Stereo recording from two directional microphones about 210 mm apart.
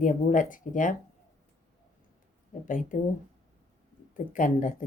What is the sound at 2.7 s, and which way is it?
Speech, 40° left (ahead or behind).